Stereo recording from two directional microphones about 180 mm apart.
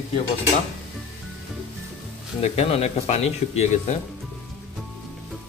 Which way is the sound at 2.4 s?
35° left (ahead or behind).